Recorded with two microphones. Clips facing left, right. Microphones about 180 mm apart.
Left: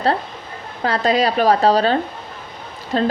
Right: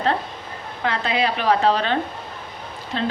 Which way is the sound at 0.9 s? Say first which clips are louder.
Left 5 dB; 40° left (ahead or behind).